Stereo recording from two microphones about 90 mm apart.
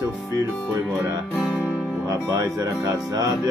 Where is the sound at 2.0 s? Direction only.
40° right (ahead or behind).